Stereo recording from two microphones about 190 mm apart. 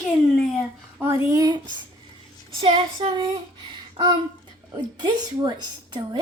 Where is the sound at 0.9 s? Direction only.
10° right (ahead or behind).